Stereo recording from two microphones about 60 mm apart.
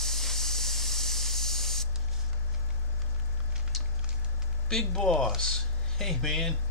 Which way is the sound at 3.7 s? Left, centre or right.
Centre.